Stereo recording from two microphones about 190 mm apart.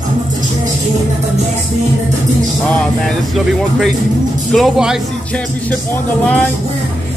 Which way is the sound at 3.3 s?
Centre (ahead or behind).